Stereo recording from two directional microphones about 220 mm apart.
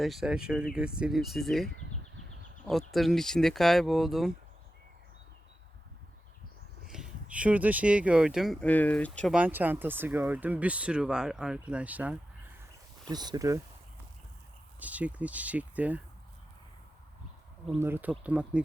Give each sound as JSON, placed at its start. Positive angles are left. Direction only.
{"t": 0.0, "sound": "speech", "side_deg": 0}
{"t": 6.8, "sound": "speech", "side_deg": 0}
{"t": 13.1, "sound": "speech", "side_deg": -20}
{"t": 14.8, "sound": "speech", "side_deg": -5}
{"t": 17.7, "sound": "speech", "side_deg": -10}